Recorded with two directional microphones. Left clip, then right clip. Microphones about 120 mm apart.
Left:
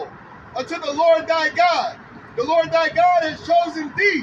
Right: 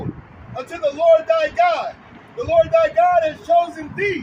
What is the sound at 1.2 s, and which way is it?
Speech, 65° right (ahead or behind).